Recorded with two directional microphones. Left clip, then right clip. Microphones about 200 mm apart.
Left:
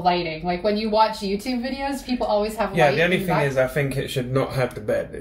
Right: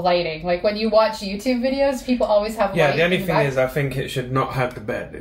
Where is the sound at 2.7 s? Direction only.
10° left (ahead or behind).